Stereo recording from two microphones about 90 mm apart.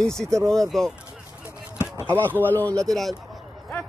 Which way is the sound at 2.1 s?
20° right (ahead or behind).